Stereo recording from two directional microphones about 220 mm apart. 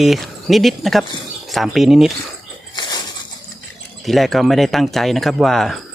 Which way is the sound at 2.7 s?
20° left (ahead or behind).